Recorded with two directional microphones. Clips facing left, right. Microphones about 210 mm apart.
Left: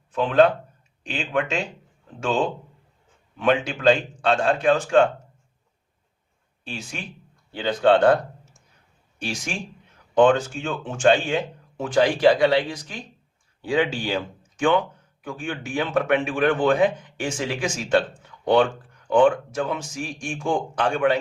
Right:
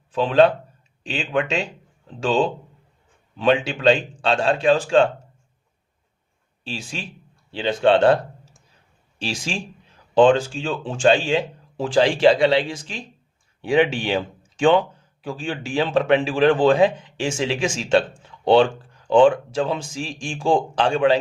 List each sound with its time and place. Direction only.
0.1 s speech: 30° right (ahead or behind)
6.7 s speech: 30° right (ahead or behind)